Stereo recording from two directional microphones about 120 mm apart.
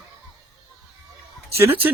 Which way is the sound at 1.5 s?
20° right (ahead or behind).